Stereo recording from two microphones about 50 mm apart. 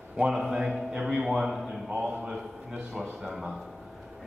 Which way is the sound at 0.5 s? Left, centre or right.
Centre.